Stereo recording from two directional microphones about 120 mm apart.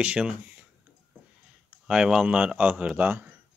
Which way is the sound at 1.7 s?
5° right (ahead or behind).